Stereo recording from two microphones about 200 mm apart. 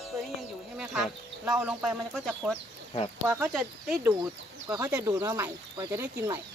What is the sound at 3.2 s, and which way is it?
Speech, 10° right (ahead or behind).